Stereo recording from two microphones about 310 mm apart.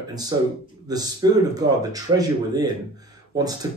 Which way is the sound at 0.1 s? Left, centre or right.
Centre.